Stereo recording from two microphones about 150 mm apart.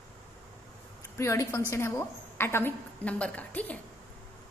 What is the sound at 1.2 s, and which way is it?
A woman's voice, 20° left (ahead or behind).